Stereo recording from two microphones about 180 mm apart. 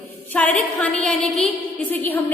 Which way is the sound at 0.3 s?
10° left (ahead or behind).